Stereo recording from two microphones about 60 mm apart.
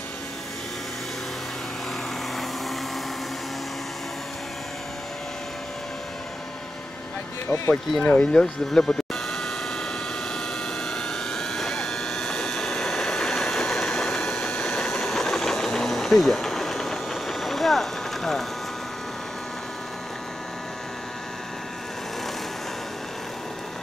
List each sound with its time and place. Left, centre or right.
7.4 s speech: left
8.0 s speech: left
8.3 s speech: centre
10.9 s vehicle: centre